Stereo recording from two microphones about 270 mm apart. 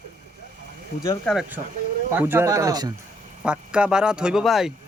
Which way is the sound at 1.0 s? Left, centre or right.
Centre.